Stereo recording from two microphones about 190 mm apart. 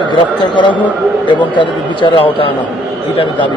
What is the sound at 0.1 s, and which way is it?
Speech, 25° left (ahead or behind).